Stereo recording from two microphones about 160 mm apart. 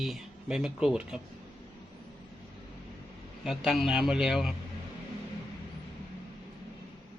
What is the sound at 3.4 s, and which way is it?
Speech, centre (ahead or behind).